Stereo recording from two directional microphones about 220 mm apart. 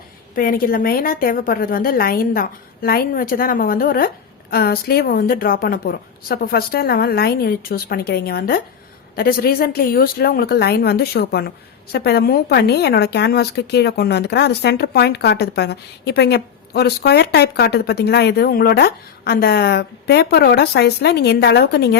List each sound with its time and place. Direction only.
0.3 s a woman's voice: 40° left (ahead or behind)